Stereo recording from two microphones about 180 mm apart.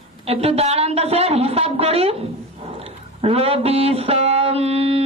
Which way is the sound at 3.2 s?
35° right (ahead or behind).